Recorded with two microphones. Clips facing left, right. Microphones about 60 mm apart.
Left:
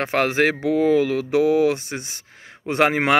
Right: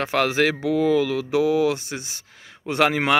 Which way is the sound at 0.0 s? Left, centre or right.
Left.